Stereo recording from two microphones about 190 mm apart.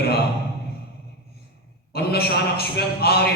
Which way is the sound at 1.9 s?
55° left (ahead or behind).